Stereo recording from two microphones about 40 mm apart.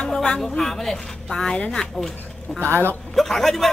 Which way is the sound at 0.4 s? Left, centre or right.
Centre.